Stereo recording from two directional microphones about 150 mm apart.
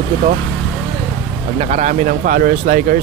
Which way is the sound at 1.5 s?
50° right (ahead or behind).